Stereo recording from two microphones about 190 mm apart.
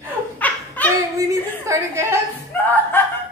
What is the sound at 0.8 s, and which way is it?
Clapping, 10° left (ahead or behind).